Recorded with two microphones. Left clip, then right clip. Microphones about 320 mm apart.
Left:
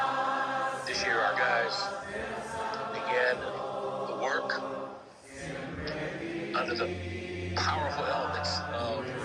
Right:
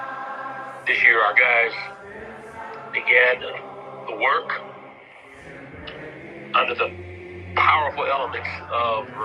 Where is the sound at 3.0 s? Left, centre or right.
Right.